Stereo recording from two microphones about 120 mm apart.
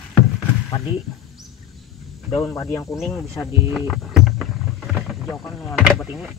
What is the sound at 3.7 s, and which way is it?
Music, centre (ahead or behind).